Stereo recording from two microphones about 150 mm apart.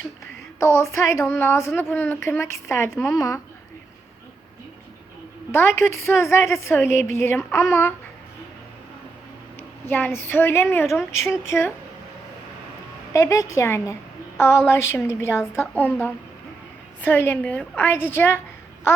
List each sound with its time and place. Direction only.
0.6 s a woman's voice: 15° left (ahead or behind)
5.5 s a woman's voice: 15° left (ahead or behind)
9.9 s a woman's voice: 15° left (ahead or behind)
13.1 s a woman's voice: 20° left (ahead or behind)